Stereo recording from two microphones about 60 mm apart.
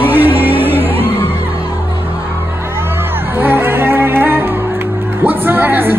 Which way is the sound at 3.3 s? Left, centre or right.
Right.